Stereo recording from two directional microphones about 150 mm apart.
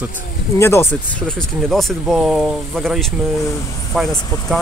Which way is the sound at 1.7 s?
Centre (ahead or behind).